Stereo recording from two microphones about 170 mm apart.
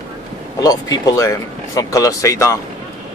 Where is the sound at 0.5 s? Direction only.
20° left (ahead or behind).